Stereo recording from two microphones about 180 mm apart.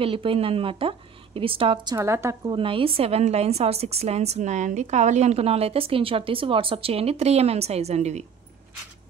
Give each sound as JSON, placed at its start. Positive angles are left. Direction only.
{"t": 0.0, "sound": "a woman's voice", "side_deg": -30}
{"t": 2.0, "sound": "a woman's voice", "side_deg": -15}
{"t": 2.5, "sound": "a woman's voice", "side_deg": -30}